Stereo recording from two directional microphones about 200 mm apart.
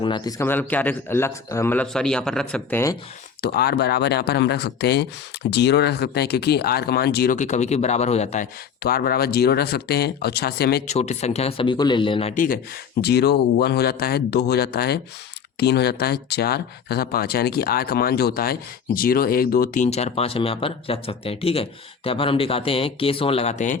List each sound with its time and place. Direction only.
0.0 s a man's voice: 20° left (ahead or behind)
3.4 s speech: 50° left (ahead or behind)
7.3 s speech: 35° left (ahead or behind)
8.8 s speech: 50° left (ahead or behind)
10.8 s speech: 35° left (ahead or behind)
12.3 s speech: 40° left (ahead or behind)
13.0 s speech: 55° left (ahead or behind); by 23.7 s 35° left (ahead or behind)